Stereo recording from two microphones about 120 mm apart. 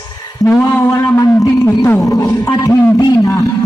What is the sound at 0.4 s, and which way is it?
A man's voice, 20° left (ahead or behind).